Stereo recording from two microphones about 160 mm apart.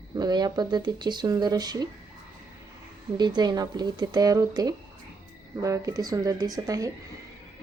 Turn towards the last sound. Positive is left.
turn(degrees=-20)  # may be behind; listen again after turning